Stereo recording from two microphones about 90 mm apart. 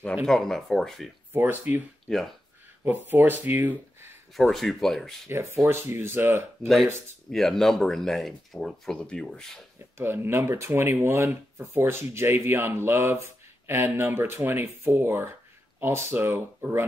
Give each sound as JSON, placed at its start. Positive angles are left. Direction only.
{"t": 0.1, "sound": "speech", "side_deg": 0}
{"t": 1.3, "sound": "speech", "side_deg": -20}
{"t": 2.1, "sound": "speech", "side_deg": 5}
{"t": 2.8, "sound": "speech", "side_deg": -20}
{"t": 4.4, "sound": "speech", "side_deg": 0}
{"t": 5.3, "sound": "speech", "side_deg": -30}
{"t": 7.2, "sound": "speech", "side_deg": 5}
{"t": 9.9, "sound": "speech", "side_deg": -25}